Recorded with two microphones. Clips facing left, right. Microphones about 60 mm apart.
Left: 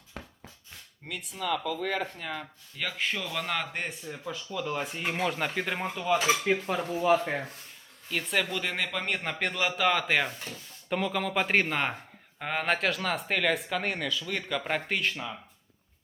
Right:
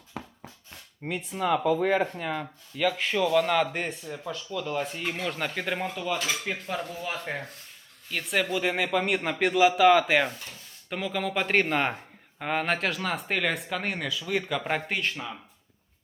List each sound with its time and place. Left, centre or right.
0.1 s a sound: centre
1.0 s speech: right
2.7 s speech: centre
5.8 s dishes: centre
8.1 s speech: centre